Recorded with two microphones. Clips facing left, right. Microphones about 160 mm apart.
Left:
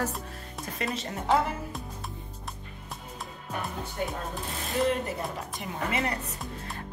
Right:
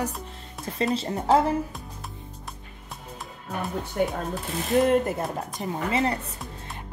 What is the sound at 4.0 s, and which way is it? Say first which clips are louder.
Speech: right 8 dB; 65° right (ahead or behind).